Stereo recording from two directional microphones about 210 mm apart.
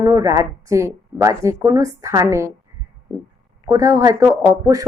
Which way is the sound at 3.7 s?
15° right (ahead or behind).